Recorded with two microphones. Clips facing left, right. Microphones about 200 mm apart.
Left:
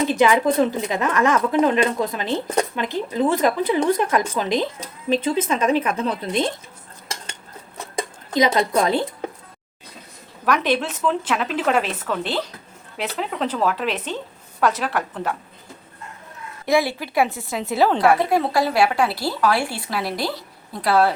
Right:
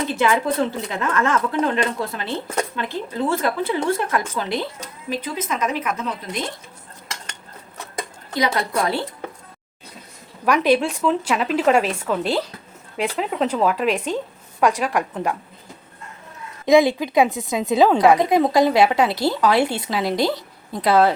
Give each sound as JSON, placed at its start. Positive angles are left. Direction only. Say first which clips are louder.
{"t": 0.1, "sound": "a woman's voice", "louder": "left 3 dB", "side_deg": 15}
{"t": 8.3, "sound": "a woman's voice", "louder": "left 4 dB", "side_deg": 20}
{"t": 10.4, "sound": "a woman's voice", "louder": "right 3 dB", "side_deg": -5}
{"t": 16.6, "sound": "a woman's voice", "louder": "right 5 dB", "side_deg": -20}